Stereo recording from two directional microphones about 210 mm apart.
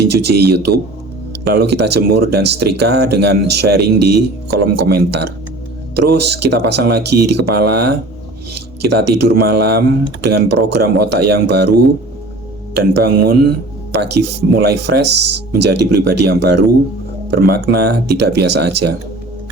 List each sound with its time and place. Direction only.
0.0 s speech: 50° right (ahead or behind)